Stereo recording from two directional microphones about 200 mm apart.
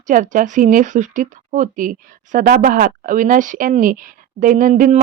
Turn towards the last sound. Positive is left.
turn(degrees=-40)  # may be behind; listen again after turning